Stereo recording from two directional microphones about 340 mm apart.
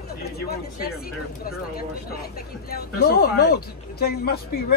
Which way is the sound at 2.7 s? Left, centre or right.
Left.